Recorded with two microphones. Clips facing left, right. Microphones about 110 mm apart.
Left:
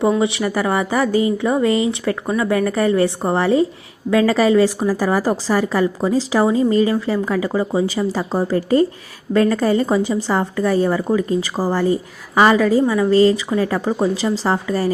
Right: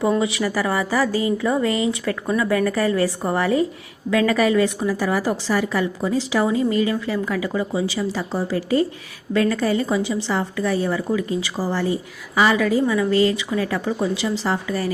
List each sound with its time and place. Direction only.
0.2 s a woman's voice: 25° left (ahead or behind); by 12.6 s 45° left (ahead or behind)
12.6 s a woman's voice: 35° left (ahead or behind)